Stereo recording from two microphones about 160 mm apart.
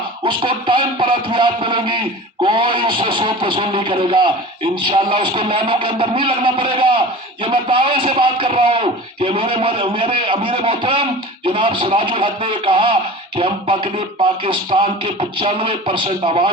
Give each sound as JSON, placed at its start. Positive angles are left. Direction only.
{"t": 0.3, "sound": "a man's voice", "side_deg": -30}